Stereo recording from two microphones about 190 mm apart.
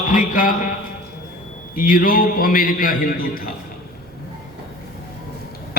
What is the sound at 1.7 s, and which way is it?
A man's voice, 45° left (ahead or behind).